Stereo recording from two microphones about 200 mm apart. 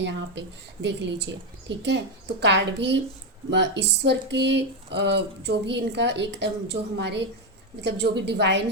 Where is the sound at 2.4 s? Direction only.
60° right (ahead or behind).